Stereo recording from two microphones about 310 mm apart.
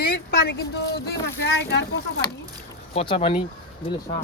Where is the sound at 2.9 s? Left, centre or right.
Centre.